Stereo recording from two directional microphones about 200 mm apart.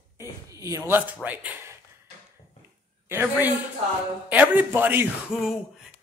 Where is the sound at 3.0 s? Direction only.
10° right (ahead or behind).